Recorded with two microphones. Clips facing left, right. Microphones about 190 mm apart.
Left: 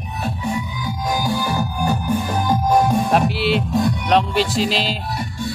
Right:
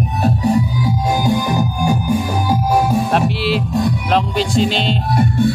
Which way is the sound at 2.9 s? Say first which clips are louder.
Right 1 dB; centre (ahead or behind).